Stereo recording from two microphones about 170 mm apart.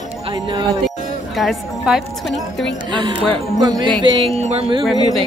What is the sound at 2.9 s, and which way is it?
Speech, 30° right (ahead or behind).